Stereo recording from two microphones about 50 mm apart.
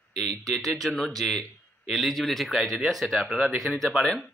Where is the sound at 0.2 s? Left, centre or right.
Centre.